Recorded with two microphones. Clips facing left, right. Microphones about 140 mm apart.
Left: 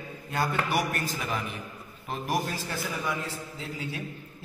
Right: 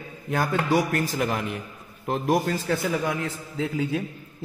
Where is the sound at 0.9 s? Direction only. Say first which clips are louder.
Right 6 dB; 70° right (ahead or behind).